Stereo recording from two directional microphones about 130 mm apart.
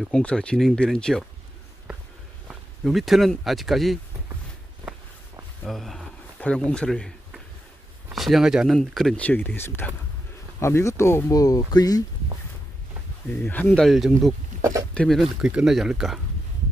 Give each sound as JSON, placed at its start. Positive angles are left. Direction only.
{"t": 0.1, "sound": "speech", "side_deg": 10}
{"t": 2.8, "sound": "speech", "side_deg": 0}
{"t": 5.7, "sound": "speech", "side_deg": 0}
{"t": 8.1, "sound": "speech", "side_deg": 0}
{"t": 13.4, "sound": "speech", "side_deg": 15}
{"t": 13.8, "sound": "speech", "side_deg": 0}
{"t": 14.6, "sound": "speech", "side_deg": -25}
{"t": 15.0, "sound": "speech", "side_deg": 0}